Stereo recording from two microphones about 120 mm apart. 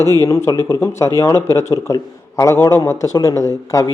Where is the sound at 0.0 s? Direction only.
25° left (ahead or behind).